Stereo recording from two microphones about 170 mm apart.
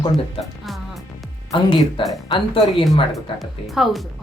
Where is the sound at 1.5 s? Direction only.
30° left (ahead or behind).